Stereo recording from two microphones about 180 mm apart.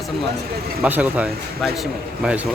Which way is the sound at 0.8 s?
10° right (ahead or behind).